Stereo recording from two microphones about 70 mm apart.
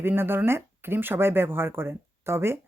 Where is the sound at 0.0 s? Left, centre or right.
Right.